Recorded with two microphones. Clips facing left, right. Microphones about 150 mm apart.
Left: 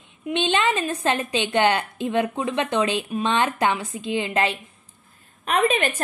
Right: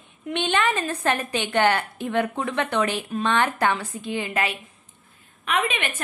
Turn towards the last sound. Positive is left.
turn(degrees=40)  # may be behind; listen again after turning